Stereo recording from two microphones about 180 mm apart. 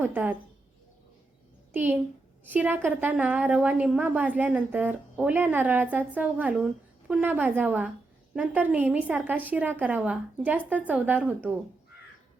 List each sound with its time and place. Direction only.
0.0 s a woman's voice: 10° right (ahead or behind)
1.7 s a child's voice: 10° right (ahead or behind)